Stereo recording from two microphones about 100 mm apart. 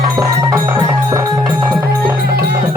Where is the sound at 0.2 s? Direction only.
35° right (ahead or behind).